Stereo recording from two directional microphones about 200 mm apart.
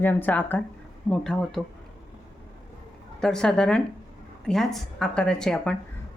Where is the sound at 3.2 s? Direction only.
5° left (ahead or behind).